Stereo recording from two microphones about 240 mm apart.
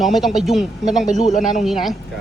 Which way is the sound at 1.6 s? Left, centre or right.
Centre.